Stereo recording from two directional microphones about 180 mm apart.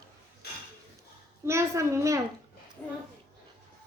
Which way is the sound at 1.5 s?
15° right (ahead or behind).